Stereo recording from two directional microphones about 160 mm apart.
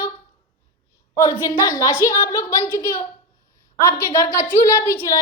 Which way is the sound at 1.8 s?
20° left (ahead or behind).